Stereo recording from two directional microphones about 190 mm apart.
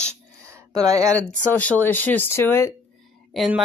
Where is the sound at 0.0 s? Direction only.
15° right (ahead or behind).